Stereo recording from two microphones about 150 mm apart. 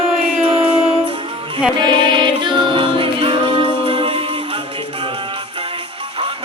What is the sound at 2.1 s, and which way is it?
Music, 30° right (ahead or behind).